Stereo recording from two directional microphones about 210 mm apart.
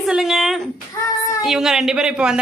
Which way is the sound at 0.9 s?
15° left (ahead or behind).